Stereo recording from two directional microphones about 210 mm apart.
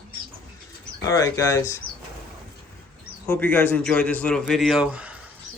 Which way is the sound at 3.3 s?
10° left (ahead or behind).